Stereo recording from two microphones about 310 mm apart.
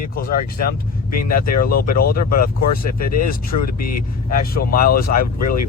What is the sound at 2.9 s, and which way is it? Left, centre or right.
Speech, left.